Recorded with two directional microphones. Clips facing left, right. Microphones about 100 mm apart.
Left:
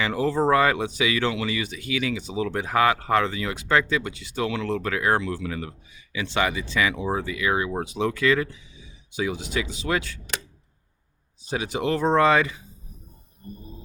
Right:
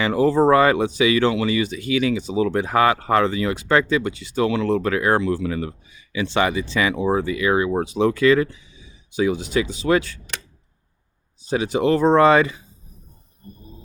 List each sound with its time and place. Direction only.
0.0 s speech: 35° right (ahead or behind)
11.4 s speech: 35° right (ahead or behind)